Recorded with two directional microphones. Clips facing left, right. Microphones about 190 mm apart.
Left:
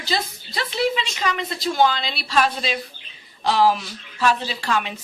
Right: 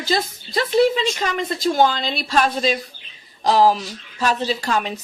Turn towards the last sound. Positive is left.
turn(degrees=-40)  # may be behind; listen again after turning